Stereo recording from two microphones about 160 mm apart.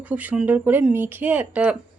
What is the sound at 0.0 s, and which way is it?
Speech, 10° right (ahead or behind).